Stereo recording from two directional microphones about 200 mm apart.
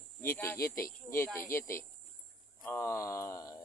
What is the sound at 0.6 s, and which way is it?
Speech, 45° left (ahead or behind).